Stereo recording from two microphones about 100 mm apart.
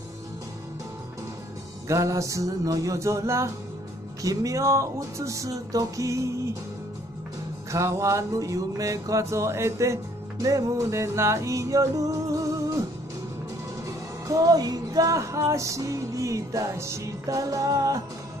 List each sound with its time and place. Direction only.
1.9 s music: 30° right (ahead or behind)
7.7 s music: 30° right (ahead or behind)
13.8 s music: 35° right (ahead or behind)